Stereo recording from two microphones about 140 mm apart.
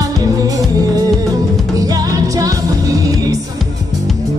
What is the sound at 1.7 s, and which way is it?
Music, 25° right (ahead or behind).